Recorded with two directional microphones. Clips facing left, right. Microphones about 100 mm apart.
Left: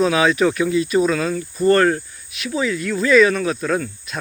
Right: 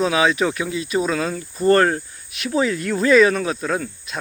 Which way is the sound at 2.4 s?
40° right (ahead or behind).